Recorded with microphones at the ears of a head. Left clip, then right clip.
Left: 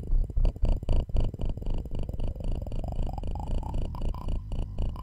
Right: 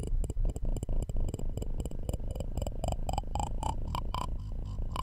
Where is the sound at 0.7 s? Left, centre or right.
Left.